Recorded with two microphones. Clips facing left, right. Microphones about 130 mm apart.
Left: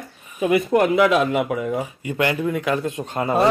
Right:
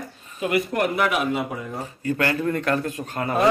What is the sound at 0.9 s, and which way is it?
Speech, 90° left.